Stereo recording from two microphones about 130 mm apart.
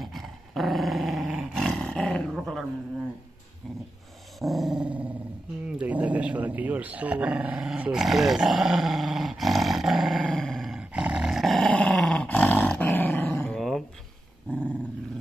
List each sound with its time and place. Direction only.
0.0 s dog: centre (ahead or behind)
4.4 s dog: centre (ahead or behind)
5.8 s growling: 10° right (ahead or behind); by 13.6 s 15° left (ahead or behind)
13.6 s a sound: centre (ahead or behind)